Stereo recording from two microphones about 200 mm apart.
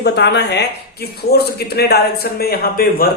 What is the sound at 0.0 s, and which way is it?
A man's voice, 55° left (ahead or behind).